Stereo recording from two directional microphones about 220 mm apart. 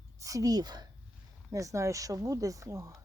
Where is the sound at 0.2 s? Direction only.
15° right (ahead or behind).